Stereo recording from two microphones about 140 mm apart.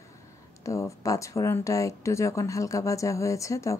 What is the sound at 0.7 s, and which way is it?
Speech, 20° left (ahead or behind).